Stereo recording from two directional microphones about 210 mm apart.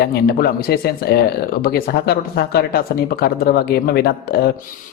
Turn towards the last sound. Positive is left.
turn(degrees=50)  # may be behind; listen again after turning